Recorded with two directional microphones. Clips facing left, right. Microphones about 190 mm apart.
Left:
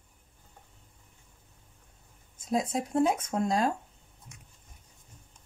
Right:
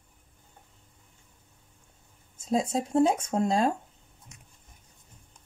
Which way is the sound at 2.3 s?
25° right (ahead or behind).